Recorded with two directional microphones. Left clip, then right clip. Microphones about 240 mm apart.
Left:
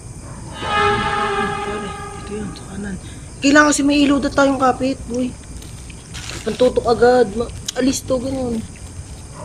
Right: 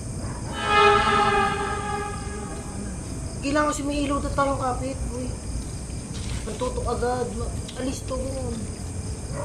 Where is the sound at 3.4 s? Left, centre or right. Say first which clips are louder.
Left 11 dB; left.